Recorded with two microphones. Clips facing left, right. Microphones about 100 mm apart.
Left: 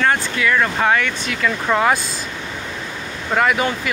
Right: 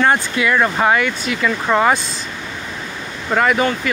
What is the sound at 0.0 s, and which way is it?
Speech, 20° right (ahead or behind).